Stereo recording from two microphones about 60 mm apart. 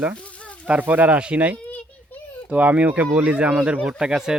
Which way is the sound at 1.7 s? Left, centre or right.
Left.